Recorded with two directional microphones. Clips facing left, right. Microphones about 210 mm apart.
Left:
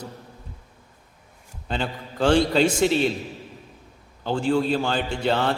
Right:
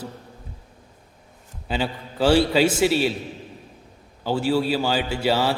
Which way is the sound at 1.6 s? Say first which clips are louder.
Right 2 dB; 5° right (ahead or behind).